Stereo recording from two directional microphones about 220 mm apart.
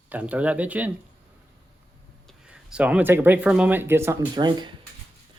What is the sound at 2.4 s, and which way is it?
Speech, 5° right (ahead or behind).